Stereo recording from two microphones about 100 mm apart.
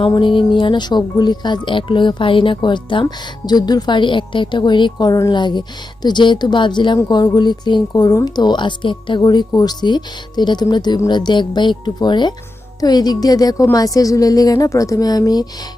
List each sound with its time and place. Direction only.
0.1 s a woman's voice: 55° left (ahead or behind)